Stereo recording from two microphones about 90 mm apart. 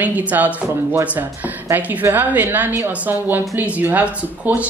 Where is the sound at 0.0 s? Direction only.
20° right (ahead or behind).